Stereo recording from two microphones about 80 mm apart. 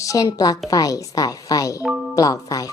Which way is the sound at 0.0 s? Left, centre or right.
Left.